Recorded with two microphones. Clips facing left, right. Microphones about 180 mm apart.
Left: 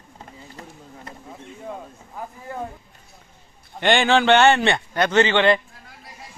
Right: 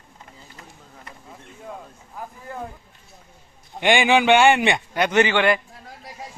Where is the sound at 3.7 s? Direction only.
10° right (ahead or behind).